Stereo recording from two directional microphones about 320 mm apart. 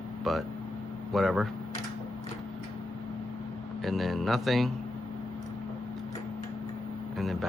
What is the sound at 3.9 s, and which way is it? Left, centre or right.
Speech, centre.